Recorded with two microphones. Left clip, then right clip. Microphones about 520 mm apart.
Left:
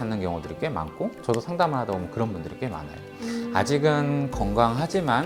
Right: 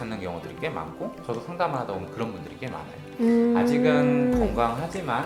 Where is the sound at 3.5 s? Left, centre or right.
Left.